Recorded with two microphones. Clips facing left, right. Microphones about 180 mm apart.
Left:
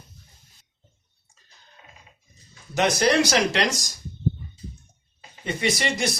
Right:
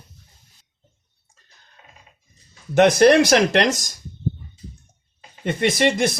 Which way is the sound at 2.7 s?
55° right (ahead or behind).